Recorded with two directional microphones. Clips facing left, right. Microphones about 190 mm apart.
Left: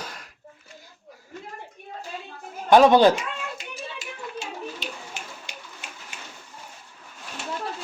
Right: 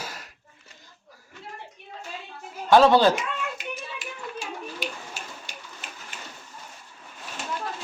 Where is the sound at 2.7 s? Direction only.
15° left (ahead or behind).